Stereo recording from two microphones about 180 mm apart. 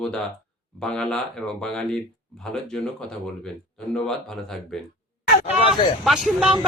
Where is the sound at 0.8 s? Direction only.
5° left (ahead or behind).